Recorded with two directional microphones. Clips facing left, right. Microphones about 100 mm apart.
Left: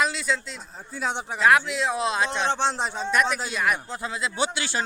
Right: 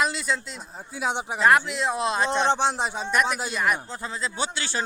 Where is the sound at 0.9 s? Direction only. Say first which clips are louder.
Right 1 dB; 10° right (ahead or behind).